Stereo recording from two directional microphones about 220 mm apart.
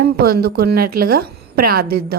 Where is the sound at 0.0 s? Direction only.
45° right (ahead or behind).